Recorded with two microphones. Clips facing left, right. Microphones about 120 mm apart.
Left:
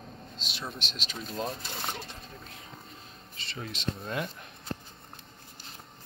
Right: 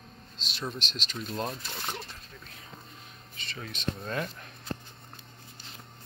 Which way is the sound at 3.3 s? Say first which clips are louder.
Left 2 dB; 25° left (ahead or behind).